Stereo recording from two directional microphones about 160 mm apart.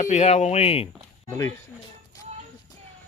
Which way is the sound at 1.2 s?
20° left (ahead or behind).